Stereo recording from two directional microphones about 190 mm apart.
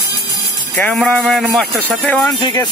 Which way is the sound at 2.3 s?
20° left (ahead or behind).